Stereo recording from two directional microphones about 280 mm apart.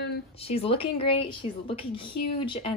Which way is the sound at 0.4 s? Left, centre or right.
Left.